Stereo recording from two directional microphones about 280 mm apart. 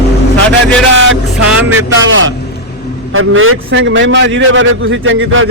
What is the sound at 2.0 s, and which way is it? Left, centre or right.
A man's voice, right.